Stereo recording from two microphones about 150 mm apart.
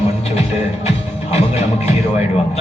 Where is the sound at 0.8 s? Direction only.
40° left (ahead or behind).